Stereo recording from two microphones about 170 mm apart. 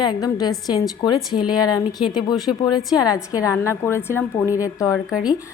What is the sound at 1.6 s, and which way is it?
Speech, 25° left (ahead or behind).